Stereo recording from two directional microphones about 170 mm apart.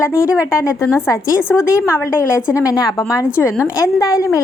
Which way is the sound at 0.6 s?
15° left (ahead or behind).